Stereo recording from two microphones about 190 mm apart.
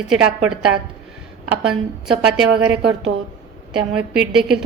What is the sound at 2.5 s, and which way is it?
Speech, 60° right (ahead or behind).